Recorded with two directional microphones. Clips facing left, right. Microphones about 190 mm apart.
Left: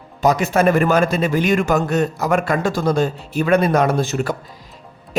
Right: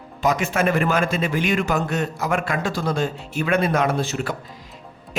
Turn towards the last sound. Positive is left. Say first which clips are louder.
# left 4 dB
turn(degrees=45)  # may be behind; listen again after turning